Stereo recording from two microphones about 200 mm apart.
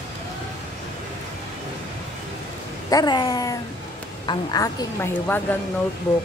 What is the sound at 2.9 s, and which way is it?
A woman's voice, 20° left (ahead or behind).